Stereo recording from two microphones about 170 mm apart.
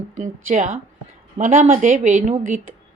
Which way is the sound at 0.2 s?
50° right (ahead or behind).